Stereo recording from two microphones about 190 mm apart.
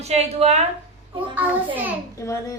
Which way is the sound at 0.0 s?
35° right (ahead or behind).